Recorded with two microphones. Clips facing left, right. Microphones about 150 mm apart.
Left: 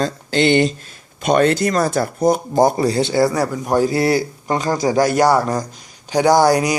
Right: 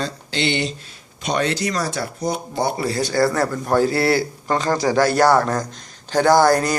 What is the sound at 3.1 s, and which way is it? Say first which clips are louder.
A man's voice: left 2 dB; 15° left (ahead or behind).